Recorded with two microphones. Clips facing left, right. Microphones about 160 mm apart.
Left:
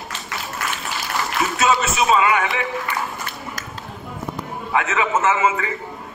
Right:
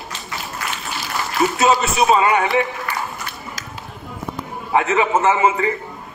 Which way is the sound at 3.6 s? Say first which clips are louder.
Left 1 dB; 60° left (ahead or behind).